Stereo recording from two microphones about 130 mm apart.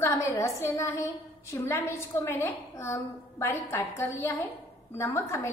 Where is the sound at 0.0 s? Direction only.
20° left (ahead or behind).